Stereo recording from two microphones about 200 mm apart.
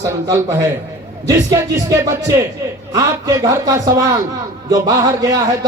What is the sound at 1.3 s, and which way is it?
Speech, 15° right (ahead or behind).